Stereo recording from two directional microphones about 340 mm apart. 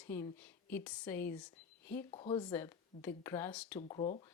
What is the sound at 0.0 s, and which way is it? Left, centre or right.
A woman's voice, centre.